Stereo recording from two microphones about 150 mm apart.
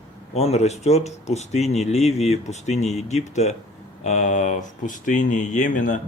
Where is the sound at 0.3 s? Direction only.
45° left (ahead or behind).